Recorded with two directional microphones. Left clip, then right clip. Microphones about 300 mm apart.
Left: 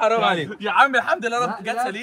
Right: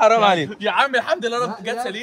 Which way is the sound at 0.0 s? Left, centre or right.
Right.